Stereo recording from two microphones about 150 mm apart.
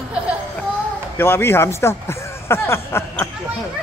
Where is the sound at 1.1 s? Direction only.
15° left (ahead or behind).